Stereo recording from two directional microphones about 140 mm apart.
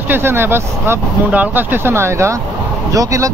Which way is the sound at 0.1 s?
15° right (ahead or behind).